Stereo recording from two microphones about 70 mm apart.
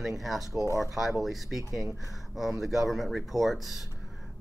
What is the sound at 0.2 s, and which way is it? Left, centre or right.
Speech, centre.